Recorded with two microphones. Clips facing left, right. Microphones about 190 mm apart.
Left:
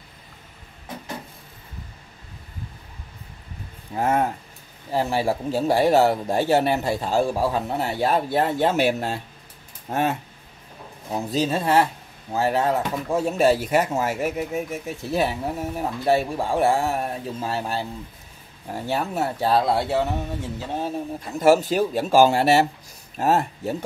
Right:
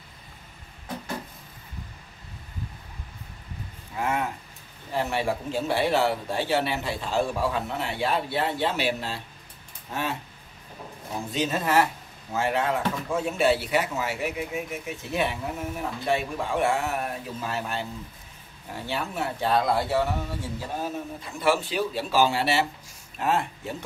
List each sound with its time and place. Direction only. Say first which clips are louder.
3.9 s a man's voice: left 6 dB; 40° left (ahead or behind)
11.1 s a man's voice: left 4 dB; 35° left (ahead or behind)
18.9 s speech: left 5 dB; 40° left (ahead or behind)
21.4 s a man's voice: left 7 dB; 45° left (ahead or behind)